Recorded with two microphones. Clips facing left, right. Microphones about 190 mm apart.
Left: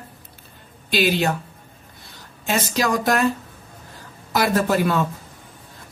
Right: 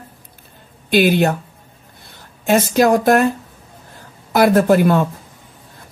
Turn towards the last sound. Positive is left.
turn(degrees=-55)  # may be behind; listen again after turning